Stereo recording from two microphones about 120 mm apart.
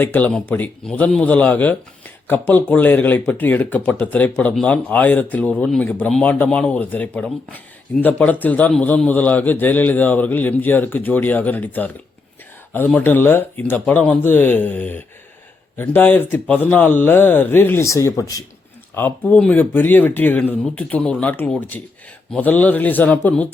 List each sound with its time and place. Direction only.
0.0 s speech: 15° left (ahead or behind)
18.9 s speech: 15° left (ahead or behind)